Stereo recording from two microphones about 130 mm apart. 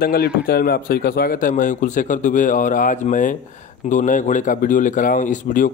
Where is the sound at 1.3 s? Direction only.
90° left.